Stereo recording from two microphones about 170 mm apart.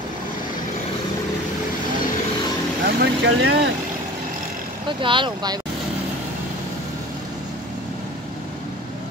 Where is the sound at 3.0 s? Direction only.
80° right.